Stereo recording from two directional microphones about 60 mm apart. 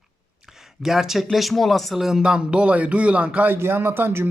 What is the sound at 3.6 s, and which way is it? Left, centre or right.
Speech, right.